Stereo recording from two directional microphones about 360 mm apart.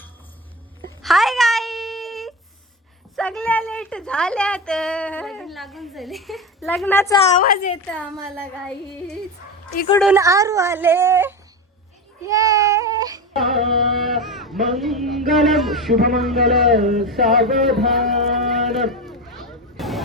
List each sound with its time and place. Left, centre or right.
0.9 s wail: centre
3.2 s a woman's voice: centre
7.3 s a woman's voice: left
7.9 s a woman's voice: centre
13.9 s a woman's voice: centre
16.9 s a sound: centre